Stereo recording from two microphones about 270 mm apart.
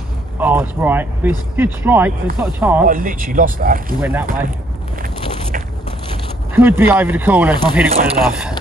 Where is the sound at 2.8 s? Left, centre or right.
Right.